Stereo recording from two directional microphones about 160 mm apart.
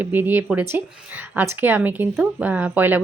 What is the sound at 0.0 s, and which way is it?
Speech, 10° right (ahead or behind).